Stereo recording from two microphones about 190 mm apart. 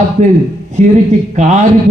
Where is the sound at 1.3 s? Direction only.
40° right (ahead or behind).